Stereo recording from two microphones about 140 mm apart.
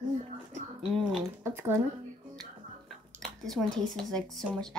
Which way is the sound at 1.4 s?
15° right (ahead or behind).